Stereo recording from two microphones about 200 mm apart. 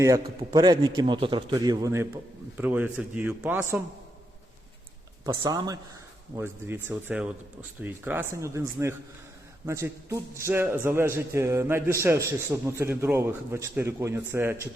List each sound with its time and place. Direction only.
0.0 s a man's voice: 15° right (ahead or behind)
5.2 s a man's voice: 20° right (ahead or behind)